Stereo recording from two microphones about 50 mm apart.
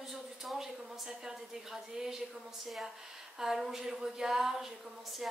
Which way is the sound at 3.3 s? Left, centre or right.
Centre.